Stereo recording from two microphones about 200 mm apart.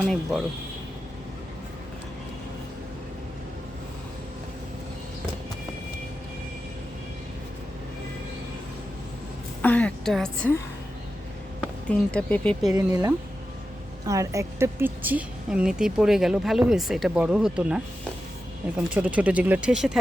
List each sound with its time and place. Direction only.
0.1 s a woman's voice: centre (ahead or behind)
9.6 s a woman's voice: 5° left (ahead or behind)
11.9 s speech: 5° left (ahead or behind)
12.7 s a woman's voice: 15° right (ahead or behind)
18.9 s speech: 5° right (ahead or behind)